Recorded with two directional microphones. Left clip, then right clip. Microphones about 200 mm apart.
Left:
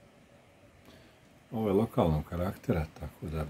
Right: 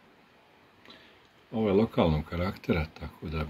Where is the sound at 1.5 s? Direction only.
25° left (ahead or behind).